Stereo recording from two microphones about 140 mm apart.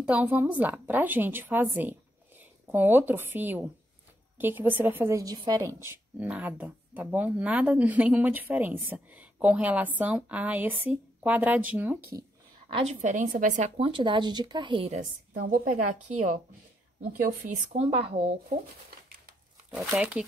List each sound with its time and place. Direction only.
0.0 s a woman's voice: 10° right (ahead or behind)
12.6 s a woman's voice: 40° right (ahead or behind)
13.0 s a woman's voice: 65° right (ahead or behind)
13.8 s speech: 35° right (ahead or behind)
14.9 s a woman's voice: 65° right (ahead or behind)
17.7 s speech: 45° right (ahead or behind)
19.9 s a woman's voice: 10° right (ahead or behind)